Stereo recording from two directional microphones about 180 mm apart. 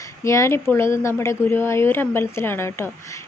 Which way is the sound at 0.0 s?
15° left (ahead or behind).